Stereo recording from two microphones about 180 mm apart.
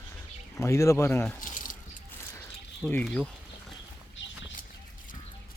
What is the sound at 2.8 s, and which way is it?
Speech, 5° left (ahead or behind).